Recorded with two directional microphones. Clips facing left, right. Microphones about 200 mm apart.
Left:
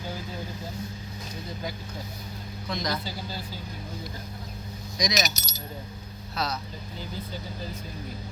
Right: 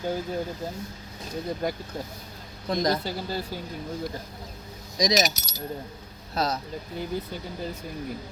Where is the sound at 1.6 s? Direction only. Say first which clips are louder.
Right 7 dB; 55° right (ahead or behind).